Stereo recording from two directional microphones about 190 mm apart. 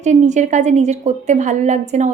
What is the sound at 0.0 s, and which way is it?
A woman's voice, 40° right (ahead or behind).